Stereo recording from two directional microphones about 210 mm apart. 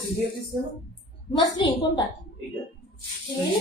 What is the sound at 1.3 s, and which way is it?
Speech, 20° left (ahead or behind).